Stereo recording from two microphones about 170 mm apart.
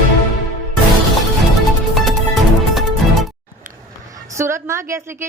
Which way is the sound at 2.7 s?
Centre (ahead or behind).